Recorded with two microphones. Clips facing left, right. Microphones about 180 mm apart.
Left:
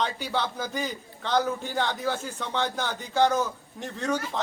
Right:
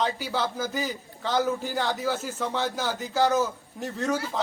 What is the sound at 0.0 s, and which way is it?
A man's voice, centre (ahead or behind).